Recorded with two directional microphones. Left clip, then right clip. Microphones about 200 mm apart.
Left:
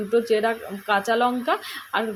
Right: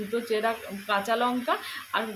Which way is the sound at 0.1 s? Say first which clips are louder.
Left 7 dB; 30° left (ahead or behind).